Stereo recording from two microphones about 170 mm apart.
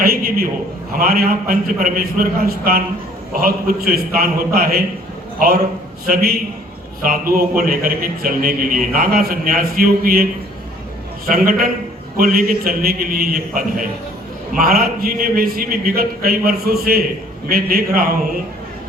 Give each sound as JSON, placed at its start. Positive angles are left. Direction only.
{"t": 0.0, "sound": "a sound", "side_deg": -60}
{"t": 0.9, "sound": "a man's voice", "side_deg": -60}
{"t": 7.0, "sound": "a man's voice", "side_deg": -60}
{"t": 11.3, "sound": "a man's voice", "side_deg": -60}